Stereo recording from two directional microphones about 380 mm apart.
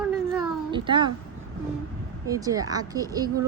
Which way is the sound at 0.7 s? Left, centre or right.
Centre.